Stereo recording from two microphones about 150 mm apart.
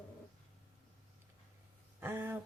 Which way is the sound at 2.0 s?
15° right (ahead or behind).